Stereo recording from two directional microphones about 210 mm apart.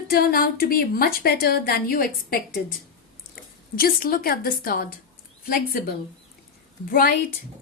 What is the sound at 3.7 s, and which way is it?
A woman's voice, 45° left (ahead or behind).